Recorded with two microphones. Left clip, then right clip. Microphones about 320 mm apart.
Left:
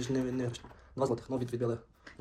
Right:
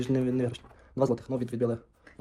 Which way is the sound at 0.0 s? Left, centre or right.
Right.